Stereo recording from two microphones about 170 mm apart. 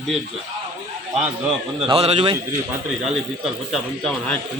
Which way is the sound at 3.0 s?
Centre (ahead or behind).